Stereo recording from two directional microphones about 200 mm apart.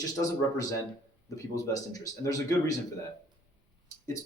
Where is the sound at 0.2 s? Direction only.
15° left (ahead or behind).